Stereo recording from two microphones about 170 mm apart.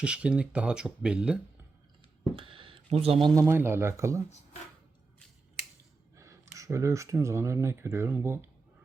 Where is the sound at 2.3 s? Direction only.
30° right (ahead or behind).